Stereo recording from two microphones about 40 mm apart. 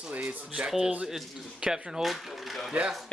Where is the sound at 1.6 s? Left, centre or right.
Centre.